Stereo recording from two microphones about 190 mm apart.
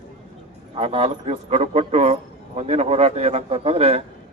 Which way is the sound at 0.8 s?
30° right (ahead or behind).